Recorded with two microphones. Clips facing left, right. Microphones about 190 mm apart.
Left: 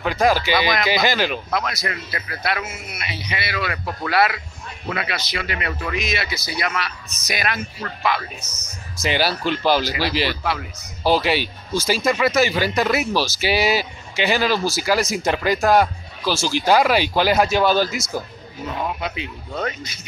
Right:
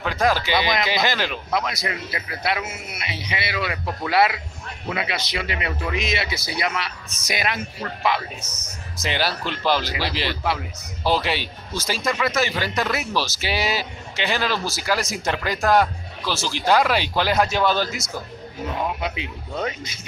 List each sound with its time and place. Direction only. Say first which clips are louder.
0.0 s speech: left 3 dB; 5° left (ahead or behind)
1.5 s a man's voice: even; 15° right (ahead or behind)
8.5 s speech: right 2 dB; 55° right (ahead or behind)
9.0 s speech: left 4 dB; 5° left (ahead or behind)
19.0 s speech: even; 15° right (ahead or behind)